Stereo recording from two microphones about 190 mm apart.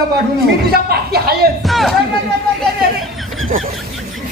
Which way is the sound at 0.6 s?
55° right (ahead or behind).